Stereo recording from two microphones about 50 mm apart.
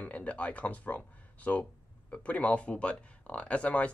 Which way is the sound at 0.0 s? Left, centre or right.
Left.